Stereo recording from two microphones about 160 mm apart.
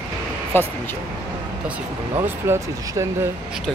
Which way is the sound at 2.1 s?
15° right (ahead or behind).